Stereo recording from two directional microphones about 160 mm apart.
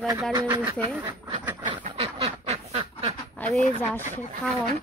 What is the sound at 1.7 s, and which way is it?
Duck, 35° right (ahead or behind).